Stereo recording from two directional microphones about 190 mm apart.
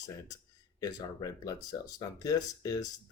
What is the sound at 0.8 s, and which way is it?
Speech, 20° left (ahead or behind).